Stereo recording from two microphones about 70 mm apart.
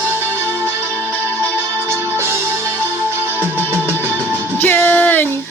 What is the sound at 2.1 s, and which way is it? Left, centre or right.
Music, right.